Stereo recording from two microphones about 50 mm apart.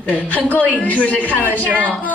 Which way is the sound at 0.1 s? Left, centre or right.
Left.